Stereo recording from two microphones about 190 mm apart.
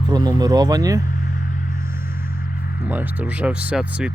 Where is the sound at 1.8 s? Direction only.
15° right (ahead or behind).